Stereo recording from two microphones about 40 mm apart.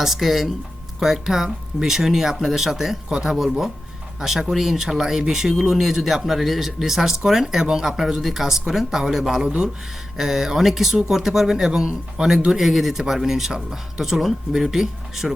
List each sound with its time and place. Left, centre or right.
0.0 s speech: centre
9.4 s speech: right
10.2 s speech: centre
12.5 s speech: centre